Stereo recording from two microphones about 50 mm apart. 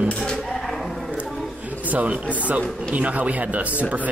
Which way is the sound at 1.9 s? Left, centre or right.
Right.